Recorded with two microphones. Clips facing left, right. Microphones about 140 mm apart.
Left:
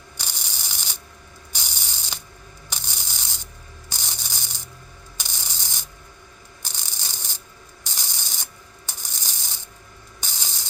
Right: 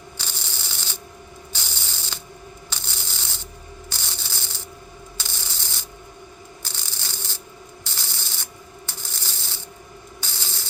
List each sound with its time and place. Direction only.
0.2 s sanding: 15° left (ahead or behind)
1.5 s ratchet: 15° left (ahead or behind)
2.6 s sanding: 15° left (ahead or behind)
3.8 s rub: 15° left (ahead or behind)
5.1 s a sound: 15° left (ahead or behind)
6.6 s rub: 15° left (ahead or behind)
7.9 s sanding: 15° left (ahead or behind)
10.2 s spray: 15° left (ahead or behind)